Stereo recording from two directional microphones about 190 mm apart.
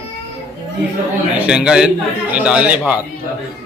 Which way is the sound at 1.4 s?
5° right (ahead or behind).